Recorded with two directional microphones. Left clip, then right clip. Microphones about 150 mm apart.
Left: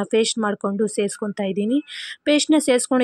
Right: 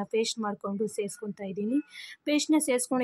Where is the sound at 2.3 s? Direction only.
35° left (ahead or behind).